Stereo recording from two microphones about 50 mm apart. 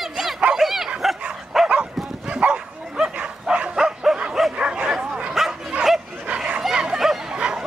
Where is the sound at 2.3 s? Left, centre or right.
Right.